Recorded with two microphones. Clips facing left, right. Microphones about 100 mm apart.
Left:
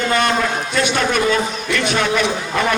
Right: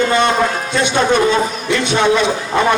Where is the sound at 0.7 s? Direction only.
25° right (ahead or behind).